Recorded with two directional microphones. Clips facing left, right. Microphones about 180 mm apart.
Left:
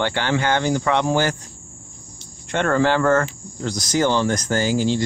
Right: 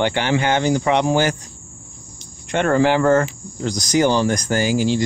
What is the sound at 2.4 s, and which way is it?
Cricket, 15° right (ahead or behind).